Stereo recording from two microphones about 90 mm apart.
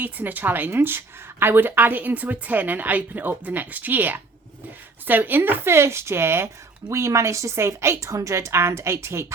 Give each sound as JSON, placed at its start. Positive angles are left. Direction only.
{"t": 0.0, "sound": "a woman's voice", "side_deg": -20}